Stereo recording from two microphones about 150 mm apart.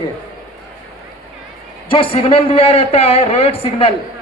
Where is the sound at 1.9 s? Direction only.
35° left (ahead or behind).